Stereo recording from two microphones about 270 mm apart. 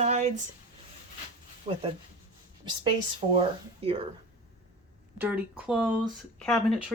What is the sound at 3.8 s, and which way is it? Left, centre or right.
Speech, right.